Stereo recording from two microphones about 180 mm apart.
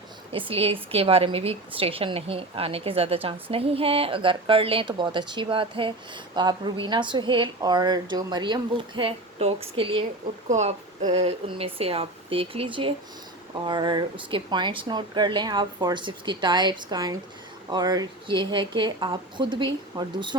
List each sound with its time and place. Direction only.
0.3 s a woman's voice: 30° right (ahead or behind)